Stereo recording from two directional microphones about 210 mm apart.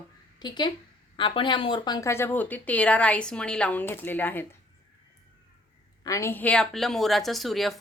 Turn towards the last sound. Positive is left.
turn(degrees=0)  # may be behind; listen again after turning